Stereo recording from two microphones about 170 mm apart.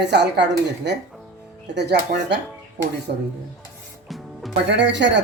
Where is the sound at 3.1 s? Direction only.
65° right (ahead or behind).